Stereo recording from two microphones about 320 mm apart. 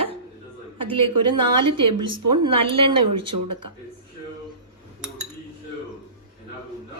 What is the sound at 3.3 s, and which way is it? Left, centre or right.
Speech, right.